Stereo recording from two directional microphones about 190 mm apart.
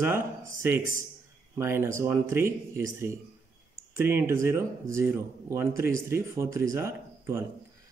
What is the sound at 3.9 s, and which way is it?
Speech, 15° right (ahead or behind).